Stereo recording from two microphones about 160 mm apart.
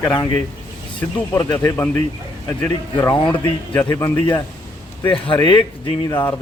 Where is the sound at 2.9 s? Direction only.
25° left (ahead or behind).